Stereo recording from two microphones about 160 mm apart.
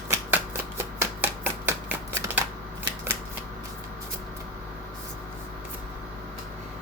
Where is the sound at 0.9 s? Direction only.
15° right (ahead or behind).